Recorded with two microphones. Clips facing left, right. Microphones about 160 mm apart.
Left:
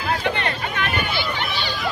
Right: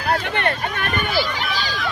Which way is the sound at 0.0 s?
50° right (ahead or behind).